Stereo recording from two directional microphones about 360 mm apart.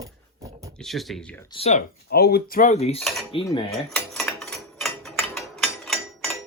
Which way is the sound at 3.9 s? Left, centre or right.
Centre.